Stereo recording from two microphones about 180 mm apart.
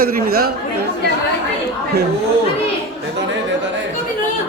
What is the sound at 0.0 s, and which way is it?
Speech, 55° right (ahead or behind).